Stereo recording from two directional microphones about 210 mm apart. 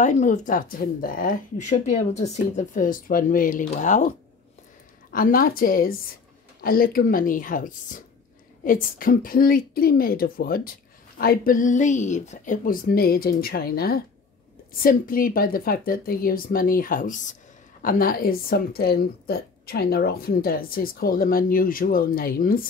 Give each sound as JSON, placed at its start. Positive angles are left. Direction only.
{"t": 0.0, "sound": "speech", "side_deg": 35}
{"t": 5.1, "sound": "speech", "side_deg": 40}